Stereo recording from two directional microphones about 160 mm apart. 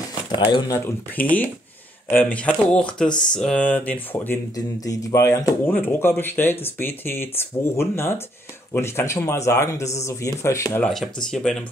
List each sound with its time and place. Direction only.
0.5 s speech: 30° left (ahead or behind)
0.8 s speech: 10° left (ahead or behind)
4.6 s speech: 20° left (ahead or behind)
10.8 s speech: 5° left (ahead or behind)